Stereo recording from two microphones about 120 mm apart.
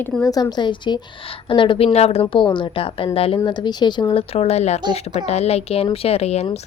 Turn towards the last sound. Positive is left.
turn(degrees=65)  # may be behind; listen again after turning